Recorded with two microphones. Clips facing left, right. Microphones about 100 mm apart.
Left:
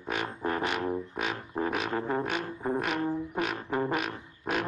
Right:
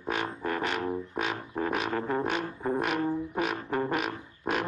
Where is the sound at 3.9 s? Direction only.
Centre (ahead or behind).